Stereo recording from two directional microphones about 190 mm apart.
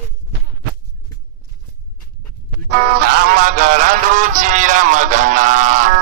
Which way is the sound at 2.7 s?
55° right (ahead or behind).